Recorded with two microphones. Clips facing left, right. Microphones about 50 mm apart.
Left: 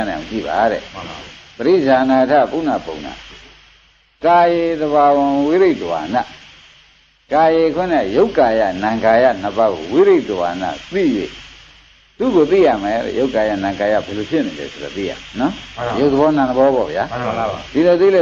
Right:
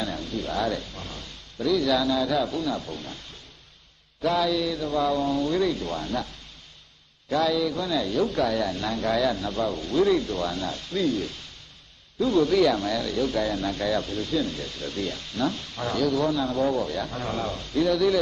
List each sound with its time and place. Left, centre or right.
0.0 s a man's voice: left
4.8 s a man's voice: left